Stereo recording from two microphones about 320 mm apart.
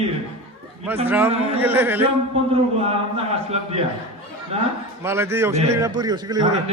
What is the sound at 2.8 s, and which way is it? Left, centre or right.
Speech, centre.